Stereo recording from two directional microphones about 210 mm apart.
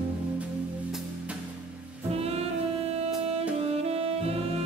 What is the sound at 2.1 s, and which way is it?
Music, 30° right (ahead or behind).